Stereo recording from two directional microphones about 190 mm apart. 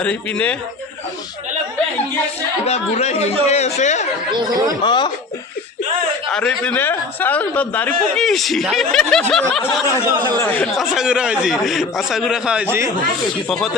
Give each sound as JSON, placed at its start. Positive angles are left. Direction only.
{"t": 0.0, "sound": "speech", "side_deg": 5}
{"t": 2.6, "sound": "speech", "side_deg": 35}
{"t": 4.3, "sound": "speech", "side_deg": -20}
{"t": 4.8, "sound": "speech", "side_deg": 25}
{"t": 6.3, "sound": "a man's voice", "side_deg": 5}